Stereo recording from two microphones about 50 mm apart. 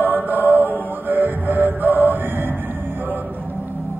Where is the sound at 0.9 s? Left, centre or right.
Right.